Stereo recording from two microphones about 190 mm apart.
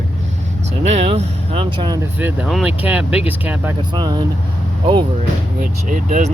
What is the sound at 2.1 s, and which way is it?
Speech, 10° right (ahead or behind).